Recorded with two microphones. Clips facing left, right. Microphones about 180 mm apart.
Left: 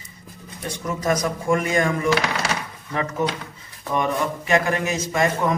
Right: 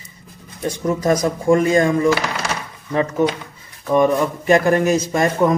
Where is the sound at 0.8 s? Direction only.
30° right (ahead or behind).